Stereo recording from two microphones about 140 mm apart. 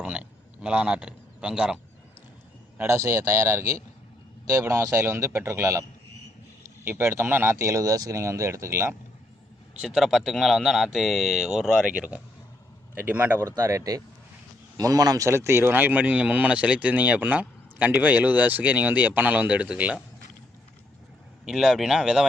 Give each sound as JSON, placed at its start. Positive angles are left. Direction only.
{"t": 0.0, "sound": "a sound", "side_deg": -10}
{"t": 2.7, "sound": "speech", "side_deg": -20}
{"t": 9.9, "sound": "speech", "side_deg": 0}
{"t": 21.4, "sound": "speech", "side_deg": -5}